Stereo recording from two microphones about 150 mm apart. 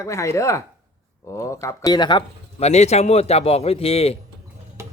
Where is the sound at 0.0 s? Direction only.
20° left (ahead or behind).